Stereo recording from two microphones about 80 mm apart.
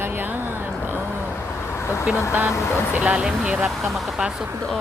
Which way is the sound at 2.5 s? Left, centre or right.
Left.